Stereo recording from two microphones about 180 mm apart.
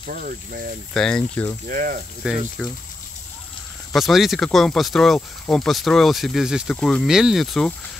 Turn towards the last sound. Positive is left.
turn(degrees=0)  # may be behind; listen again after turning